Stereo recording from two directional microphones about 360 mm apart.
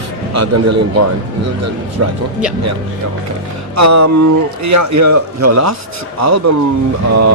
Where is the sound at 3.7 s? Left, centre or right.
Right.